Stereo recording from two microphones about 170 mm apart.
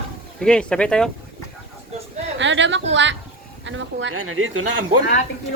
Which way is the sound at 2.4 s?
90° right.